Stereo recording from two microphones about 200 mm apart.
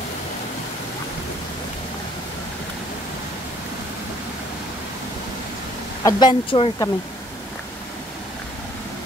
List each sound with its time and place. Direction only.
6.0 s speech: 20° left (ahead or behind)